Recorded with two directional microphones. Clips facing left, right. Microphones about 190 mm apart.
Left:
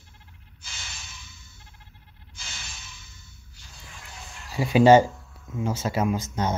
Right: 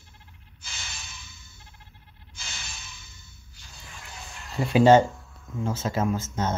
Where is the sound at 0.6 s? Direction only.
70° right (ahead or behind).